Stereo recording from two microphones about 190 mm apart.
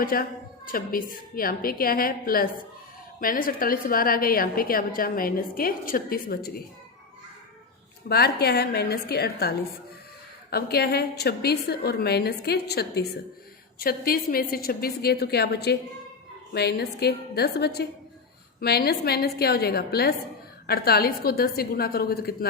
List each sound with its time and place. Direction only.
0.0 s a woman's voice: 50° left (ahead or behind)
8.0 s a woman's voice: 55° left (ahead or behind)